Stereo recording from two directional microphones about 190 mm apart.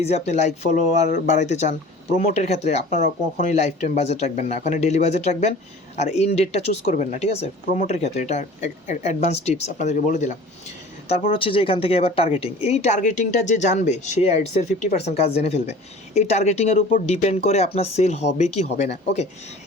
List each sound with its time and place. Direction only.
0.0 s speech: 35° left (ahead or behind)
11.1 s speech: 25° left (ahead or behind)